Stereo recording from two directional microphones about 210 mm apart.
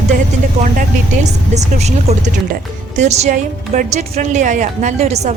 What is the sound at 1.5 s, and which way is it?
Speech, 30° right (ahead or behind).